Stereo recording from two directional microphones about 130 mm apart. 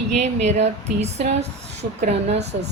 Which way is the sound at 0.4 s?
60° right (ahead or behind).